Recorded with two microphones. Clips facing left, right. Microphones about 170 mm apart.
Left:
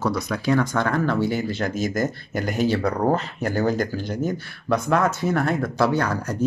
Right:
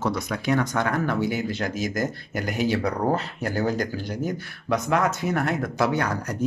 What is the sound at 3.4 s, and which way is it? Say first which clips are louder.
Speech: left 3 dB; 55° left (ahead or behind).